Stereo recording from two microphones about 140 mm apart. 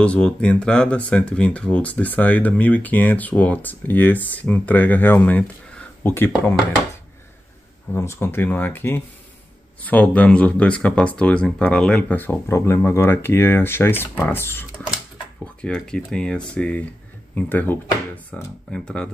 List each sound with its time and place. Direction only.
0.0 s speech: 10° left (ahead or behind)
7.9 s speech: 20° left (ahead or behind)